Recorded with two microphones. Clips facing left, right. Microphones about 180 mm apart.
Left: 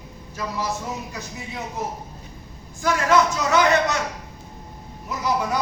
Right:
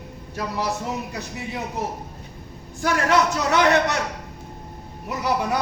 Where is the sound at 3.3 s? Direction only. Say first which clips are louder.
Even; 65° right (ahead or behind).